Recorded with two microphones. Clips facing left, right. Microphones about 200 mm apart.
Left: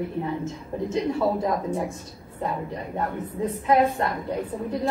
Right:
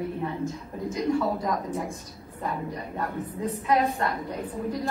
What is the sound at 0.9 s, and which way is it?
Speech, 25° left (ahead or behind).